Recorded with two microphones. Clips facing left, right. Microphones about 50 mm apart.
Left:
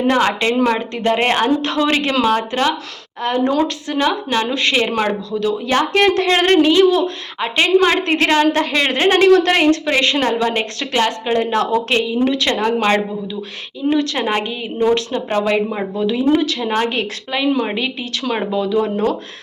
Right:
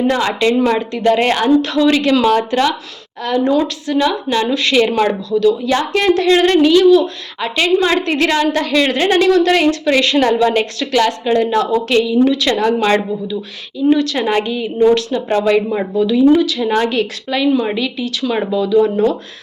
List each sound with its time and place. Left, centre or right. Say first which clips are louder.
0.1 s speech: right 1 dB; left
3.2 s a woman's voice: right 2 dB; left
5.6 s speech: even; left
7.8 s speech: even; left
9.8 s a woman's voice: right 3 dB; left
13.9 s a woman's voice: right 2 dB; left
16.0 s a woman's voice: right 5 dB; left
17.7 s speech: right 3 dB; left